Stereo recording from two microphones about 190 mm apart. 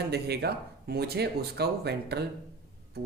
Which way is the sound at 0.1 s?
60° right (ahead or behind).